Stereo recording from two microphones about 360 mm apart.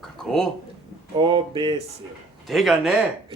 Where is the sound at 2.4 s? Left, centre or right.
Centre.